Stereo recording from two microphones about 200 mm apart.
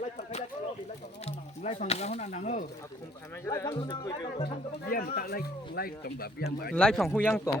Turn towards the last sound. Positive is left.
turn(degrees=10)  # may be behind; listen again after turning